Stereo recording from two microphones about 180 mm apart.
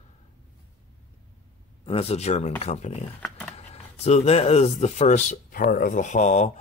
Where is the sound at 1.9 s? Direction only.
35° left (ahead or behind).